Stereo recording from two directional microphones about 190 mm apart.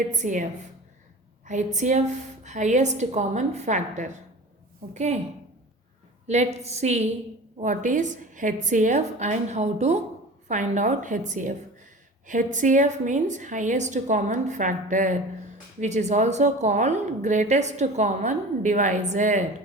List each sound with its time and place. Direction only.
0.1 s a woman's voice: 40° right (ahead or behind)
1.5 s a woman's voice: 40° right (ahead or behind)
6.2 s a woman's voice: 35° right (ahead or behind)